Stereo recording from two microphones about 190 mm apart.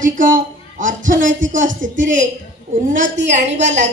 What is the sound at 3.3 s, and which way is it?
Speech, 40° right (ahead or behind).